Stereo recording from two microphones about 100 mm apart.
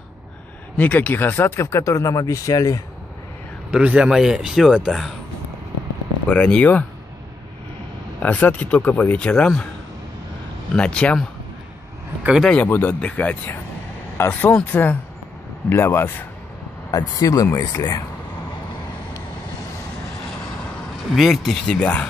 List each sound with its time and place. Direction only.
0.7 s speech: 15° left (ahead or behind); by 2.8 s 35° left (ahead or behind)
3.8 s speech: 10° right (ahead or behind)
6.2 s speech: 10° left (ahead or behind)
8.2 s speech: 15° left (ahead or behind)
10.7 s speech: 10° left (ahead or behind)
12.2 s speech: 10° right (ahead or behind)
12.6 s speech: 20° left (ahead or behind)
16.9 s speech: 35° left (ahead or behind)
21.1 s speech: centre (ahead or behind)